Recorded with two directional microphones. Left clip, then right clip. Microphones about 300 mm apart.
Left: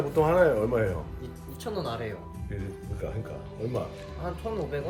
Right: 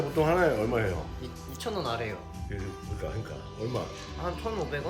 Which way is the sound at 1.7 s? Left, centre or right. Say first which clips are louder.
Right 1 dB; centre.